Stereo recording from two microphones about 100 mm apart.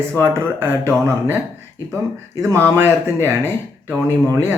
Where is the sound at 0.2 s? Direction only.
25° right (ahead or behind).